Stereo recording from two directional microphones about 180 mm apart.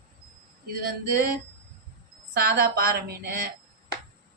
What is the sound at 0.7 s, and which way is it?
Speech, 55° right (ahead or behind).